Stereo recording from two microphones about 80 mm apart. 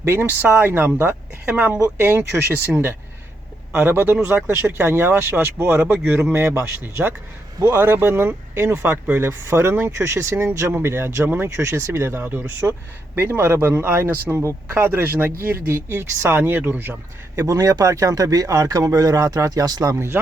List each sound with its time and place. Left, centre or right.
0.0 s speech: right
17.3 s speech: right